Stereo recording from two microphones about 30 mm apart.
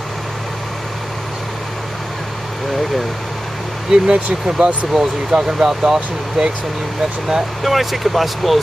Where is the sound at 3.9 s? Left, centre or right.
Right.